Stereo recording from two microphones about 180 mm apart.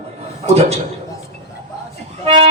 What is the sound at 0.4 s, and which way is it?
Speech, 35° right (ahead or behind).